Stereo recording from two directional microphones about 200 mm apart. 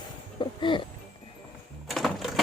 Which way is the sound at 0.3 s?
25° left (ahead or behind).